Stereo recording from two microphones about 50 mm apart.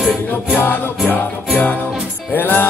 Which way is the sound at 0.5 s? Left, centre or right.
Left.